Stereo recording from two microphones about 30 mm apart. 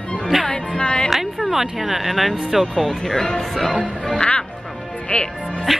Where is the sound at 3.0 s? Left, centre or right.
Left.